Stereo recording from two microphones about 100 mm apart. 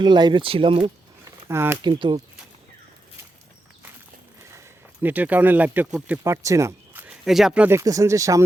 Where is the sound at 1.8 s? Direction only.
50° right (ahead or behind).